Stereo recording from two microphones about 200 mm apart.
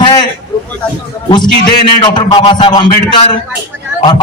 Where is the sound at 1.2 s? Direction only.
20° left (ahead or behind).